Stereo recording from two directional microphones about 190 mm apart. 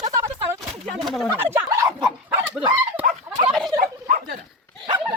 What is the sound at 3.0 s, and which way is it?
Fowl, 35° right (ahead or behind).